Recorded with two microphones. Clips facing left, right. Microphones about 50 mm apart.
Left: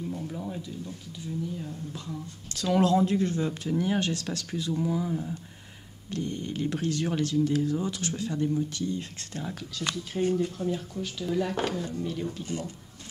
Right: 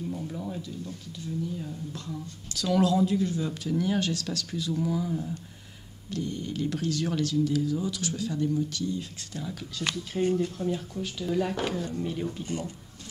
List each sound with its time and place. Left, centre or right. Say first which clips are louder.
0.1 s speech: even; centre
2.5 s speech: left 1 dB; left
3.4 s speech: even; left
4.7 s speech: even; centre
6.1 s speech: even; left
9.8 s speech: right 1 dB; centre
12.0 s speech: right 1 dB; centre
12.4 s speech: right 1 dB; centre